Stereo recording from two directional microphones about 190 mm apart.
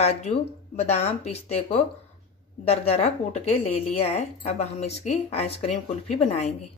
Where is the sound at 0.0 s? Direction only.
35° left (ahead or behind).